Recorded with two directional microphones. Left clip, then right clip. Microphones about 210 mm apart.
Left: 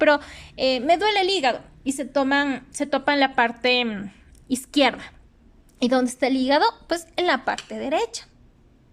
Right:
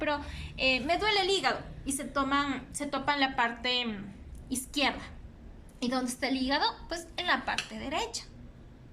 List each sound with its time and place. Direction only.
0.0 s a woman's voice: 40° left (ahead or behind)